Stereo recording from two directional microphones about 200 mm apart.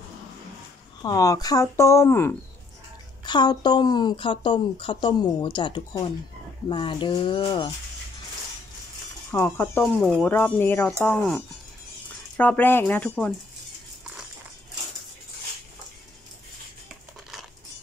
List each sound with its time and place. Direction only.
1.0 s speech: 15° left (ahead or behind)
9.3 s speech: 10° left (ahead or behind)